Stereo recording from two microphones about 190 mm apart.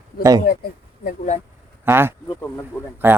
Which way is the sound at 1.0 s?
40° left (ahead or behind).